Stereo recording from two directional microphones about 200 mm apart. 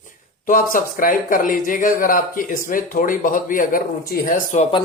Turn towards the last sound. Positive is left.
turn(degrees=40)  # may be behind; listen again after turning